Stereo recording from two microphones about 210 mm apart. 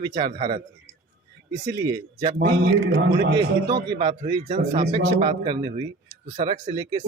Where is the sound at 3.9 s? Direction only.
25° right (ahead or behind).